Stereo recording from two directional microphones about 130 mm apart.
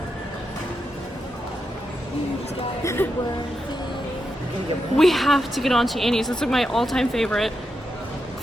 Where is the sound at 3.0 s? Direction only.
15° left (ahead or behind).